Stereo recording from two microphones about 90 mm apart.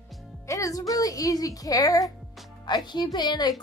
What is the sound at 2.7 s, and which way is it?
Speech, 55° left (ahead or behind).